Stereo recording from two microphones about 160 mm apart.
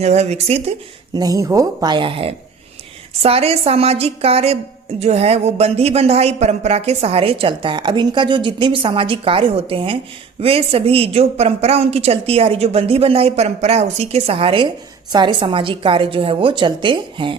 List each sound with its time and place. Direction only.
0.0 s speech: 45° right (ahead or behind)
1.1 s a woman's voice: 25° right (ahead or behind)